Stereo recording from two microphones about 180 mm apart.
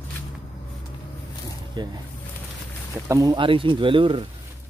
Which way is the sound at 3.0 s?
20° right (ahead or behind).